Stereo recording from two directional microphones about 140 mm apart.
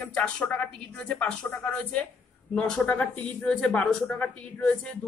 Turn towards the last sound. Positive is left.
turn(degrees=10)  # may be behind; listen again after turning